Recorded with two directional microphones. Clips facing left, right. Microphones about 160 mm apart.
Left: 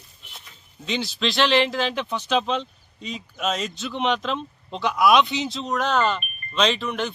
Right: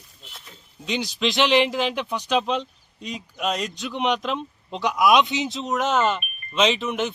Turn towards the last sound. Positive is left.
turn(degrees=-15)  # may be behind; listen again after turning